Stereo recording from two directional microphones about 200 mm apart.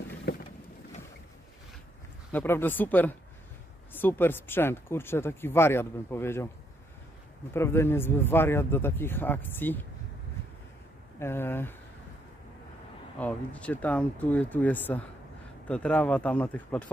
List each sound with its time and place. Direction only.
0.3 s boat: 55° left (ahead or behind)
2.3 s speech: 10° left (ahead or behind)
7.5 s speech: 10° left (ahead or behind)
11.1 s speech: 10° left (ahead or behind)
13.2 s speech: 5° left (ahead or behind)